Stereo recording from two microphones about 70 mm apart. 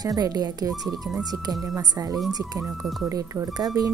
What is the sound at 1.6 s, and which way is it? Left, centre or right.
Speech, right.